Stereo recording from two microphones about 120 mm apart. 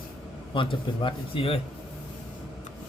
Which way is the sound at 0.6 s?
45° left (ahead or behind).